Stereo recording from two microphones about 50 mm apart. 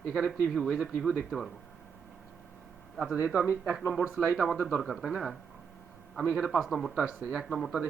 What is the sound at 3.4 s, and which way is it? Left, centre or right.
Speech, right.